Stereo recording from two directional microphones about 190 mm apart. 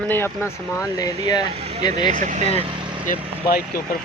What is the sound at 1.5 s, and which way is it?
Speech, 30° right (ahead or behind).